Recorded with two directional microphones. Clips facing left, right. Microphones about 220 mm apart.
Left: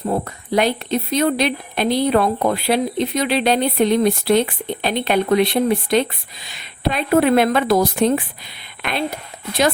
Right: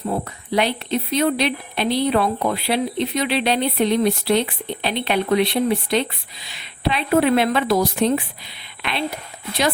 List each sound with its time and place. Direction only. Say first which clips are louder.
0.1 s speech: left 3 dB; 45° left (ahead or behind)